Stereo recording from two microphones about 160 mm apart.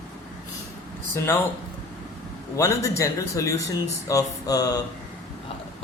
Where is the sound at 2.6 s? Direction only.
20° left (ahead or behind).